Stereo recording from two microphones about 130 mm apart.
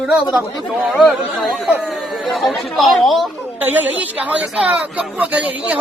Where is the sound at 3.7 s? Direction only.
10° right (ahead or behind).